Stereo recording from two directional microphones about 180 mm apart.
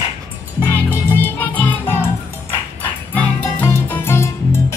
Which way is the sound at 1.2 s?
10° left (ahead or behind).